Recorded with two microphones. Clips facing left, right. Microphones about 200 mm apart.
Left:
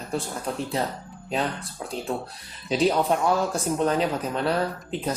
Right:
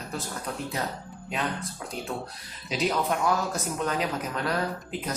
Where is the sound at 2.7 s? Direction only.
30° left (ahead or behind).